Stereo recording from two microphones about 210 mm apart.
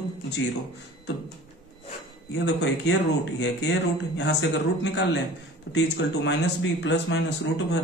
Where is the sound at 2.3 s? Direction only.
55° left (ahead or behind).